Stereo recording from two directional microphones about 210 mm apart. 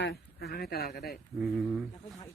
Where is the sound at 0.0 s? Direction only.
50° left (ahead or behind).